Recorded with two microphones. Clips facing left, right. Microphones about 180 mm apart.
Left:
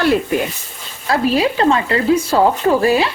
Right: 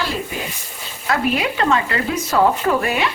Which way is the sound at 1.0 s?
30° left (ahead or behind).